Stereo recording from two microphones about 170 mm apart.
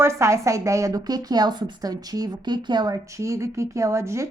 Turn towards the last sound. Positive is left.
turn(degrees=-15)  # may be behind; listen again after turning